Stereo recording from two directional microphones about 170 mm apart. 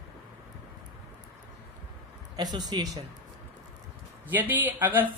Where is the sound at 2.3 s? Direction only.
25° right (ahead or behind).